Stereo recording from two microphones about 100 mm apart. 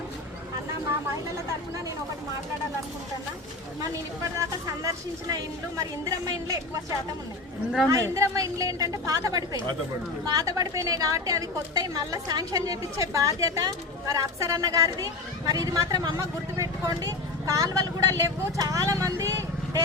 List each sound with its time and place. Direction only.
4.4 s a woman's voice: 35° right (ahead or behind)
7.9 s a woman's voice: 35° right (ahead or behind)
19.2 s vehicle: 35° right (ahead or behind)